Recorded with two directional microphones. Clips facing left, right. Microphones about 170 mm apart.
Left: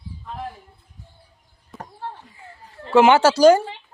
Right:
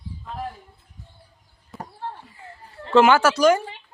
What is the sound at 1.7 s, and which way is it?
Basketball bounce, centre (ahead or behind).